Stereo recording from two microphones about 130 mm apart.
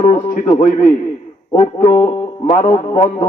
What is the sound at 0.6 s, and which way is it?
Speech, 55° left (ahead or behind).